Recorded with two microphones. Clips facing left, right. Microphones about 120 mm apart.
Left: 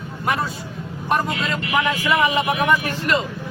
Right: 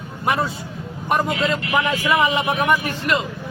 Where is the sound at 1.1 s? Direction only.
20° right (ahead or behind).